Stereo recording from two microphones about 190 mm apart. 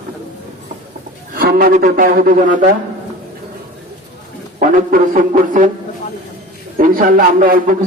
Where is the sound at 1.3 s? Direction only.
50° right (ahead or behind).